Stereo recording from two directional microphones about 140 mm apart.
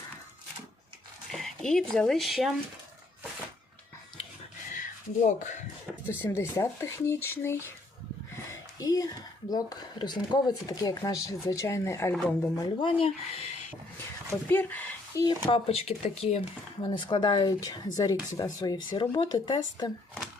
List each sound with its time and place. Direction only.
1.3 s speech: 5° left (ahead or behind)
4.7 s a sound: 65° left (ahead or behind)
6.1 s speech: 15° left (ahead or behind)
8.4 s a sound: 25° left (ahead or behind)
9.5 s speech: 30° left (ahead or behind); by 12.5 s 10° left (ahead or behind)
12.5 s speech: 35° left (ahead or behind)
14.3 s a sound: 15° left (ahead or behind)
15.4 s speech: 45° left (ahead or behind)
16.9 s speech: 35° left (ahead or behind)